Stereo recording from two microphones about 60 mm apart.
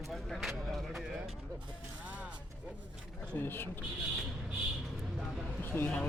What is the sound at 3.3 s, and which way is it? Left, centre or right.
Speech, left.